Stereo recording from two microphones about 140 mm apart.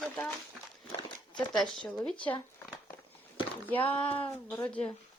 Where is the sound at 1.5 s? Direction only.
Centre (ahead or behind).